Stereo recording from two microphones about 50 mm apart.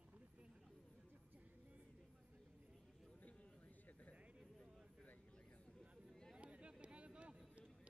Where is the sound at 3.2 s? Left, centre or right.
Left.